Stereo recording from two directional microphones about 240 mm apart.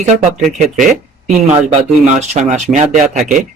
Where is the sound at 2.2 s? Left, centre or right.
Right.